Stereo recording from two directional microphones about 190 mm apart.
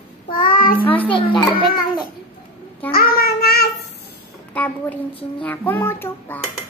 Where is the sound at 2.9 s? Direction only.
55° left (ahead or behind).